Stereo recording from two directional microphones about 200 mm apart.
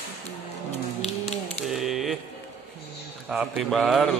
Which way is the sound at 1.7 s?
Centre (ahead or behind).